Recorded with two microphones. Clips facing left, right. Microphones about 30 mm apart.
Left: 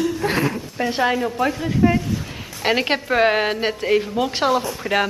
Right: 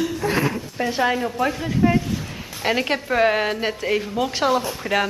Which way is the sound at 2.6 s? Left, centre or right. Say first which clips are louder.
Left 2 dB; centre.